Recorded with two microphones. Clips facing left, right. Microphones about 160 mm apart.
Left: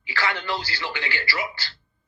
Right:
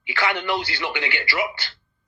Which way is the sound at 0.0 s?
20° right (ahead or behind).